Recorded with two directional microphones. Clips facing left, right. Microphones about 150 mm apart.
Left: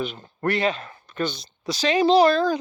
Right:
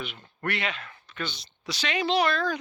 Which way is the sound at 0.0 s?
40° left (ahead or behind).